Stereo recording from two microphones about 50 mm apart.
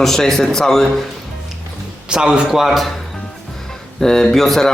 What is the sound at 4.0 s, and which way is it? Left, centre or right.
Speech, centre.